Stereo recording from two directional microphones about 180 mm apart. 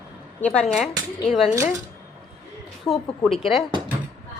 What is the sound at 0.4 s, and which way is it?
Speech, 5° left (ahead or behind).